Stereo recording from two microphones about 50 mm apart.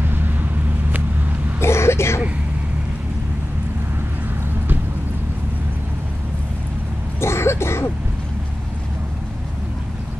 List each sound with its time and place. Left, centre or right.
0.0 s vehicle: right
1.6 s a sound: left
7.2 s cough: left